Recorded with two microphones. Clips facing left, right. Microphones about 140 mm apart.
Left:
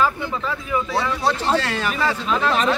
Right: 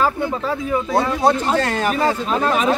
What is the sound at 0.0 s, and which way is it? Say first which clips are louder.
Speech: right 2 dB; 40° right (ahead or behind).